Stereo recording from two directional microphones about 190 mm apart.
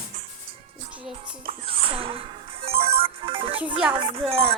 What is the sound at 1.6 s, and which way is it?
Speech, 30° right (ahead or behind).